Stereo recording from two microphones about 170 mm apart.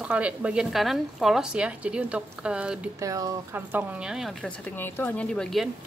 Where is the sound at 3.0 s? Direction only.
20° right (ahead or behind); by 5.6 s 5° left (ahead or behind).